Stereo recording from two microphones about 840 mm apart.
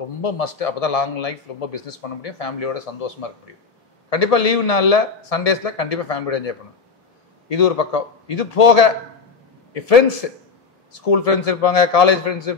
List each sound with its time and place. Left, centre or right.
0.2 s a man's voice: left